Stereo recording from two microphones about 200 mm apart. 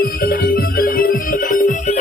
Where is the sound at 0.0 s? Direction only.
50° left (ahead or behind).